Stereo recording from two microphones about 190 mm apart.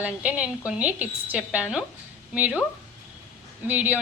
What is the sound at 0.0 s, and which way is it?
A woman's voice, 5° right (ahead or behind).